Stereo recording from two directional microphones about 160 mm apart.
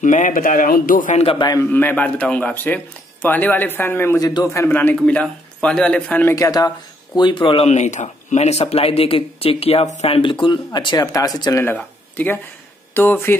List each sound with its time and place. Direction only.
0.0 s a man's voice: 50° left (ahead or behind)
1.1 s speech: 35° left (ahead or behind)
1.6 s a man's voice: 10° left (ahead or behind)
4.3 s speech: 25° left (ahead or behind)
4.6 s a man's voice: 10° left (ahead or behind)
6.3 s speech: 20° left (ahead or behind)
11.6 s a man's voice: 10° left (ahead or behind)